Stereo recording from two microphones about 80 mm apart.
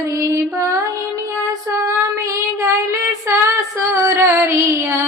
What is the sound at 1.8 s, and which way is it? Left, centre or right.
Child singing, right.